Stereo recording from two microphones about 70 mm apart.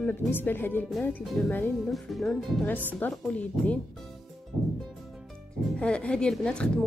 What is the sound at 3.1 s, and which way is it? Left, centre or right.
Speech, centre.